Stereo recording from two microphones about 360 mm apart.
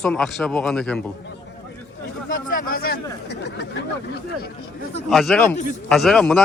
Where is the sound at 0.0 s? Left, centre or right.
Centre.